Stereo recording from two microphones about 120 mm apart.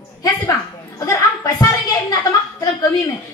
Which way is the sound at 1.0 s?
30° left (ahead or behind).